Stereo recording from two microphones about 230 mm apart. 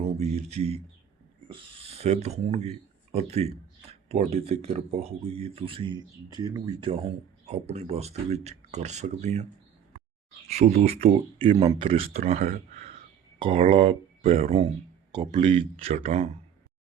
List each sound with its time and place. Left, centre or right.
0.0 s a sound: right
1.5 s speech: right
10.5 s speech: right
11.5 s speech: centre
11.8 s speech: right